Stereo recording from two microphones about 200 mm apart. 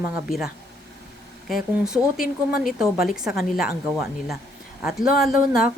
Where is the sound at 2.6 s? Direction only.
Centre (ahead or behind).